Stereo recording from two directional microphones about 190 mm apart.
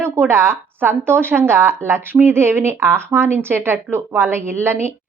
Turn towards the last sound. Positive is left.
turn(degrees=-10)  # may be behind; listen again after turning